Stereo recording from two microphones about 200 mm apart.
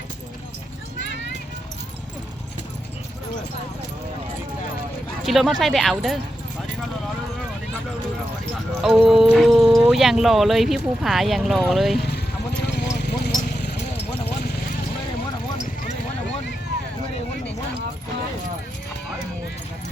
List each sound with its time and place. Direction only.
5.2 s speech: centre (ahead or behind)
9.0 s speech: centre (ahead or behind)
12.6 s vehicle: 55° left (ahead or behind)